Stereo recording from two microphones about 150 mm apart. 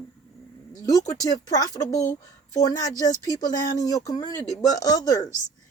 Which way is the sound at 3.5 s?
60° left (ahead or behind).